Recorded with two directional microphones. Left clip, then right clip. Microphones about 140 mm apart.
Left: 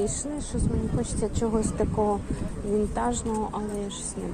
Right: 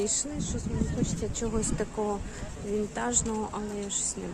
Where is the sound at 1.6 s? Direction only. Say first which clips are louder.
Left 5 dB; 20° right (ahead or behind).